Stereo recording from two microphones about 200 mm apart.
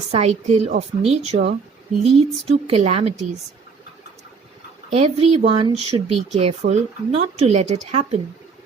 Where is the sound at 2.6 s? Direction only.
30° right (ahead or behind).